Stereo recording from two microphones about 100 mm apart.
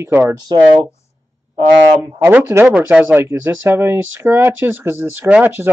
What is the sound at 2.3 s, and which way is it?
Speech, 20° right (ahead or behind).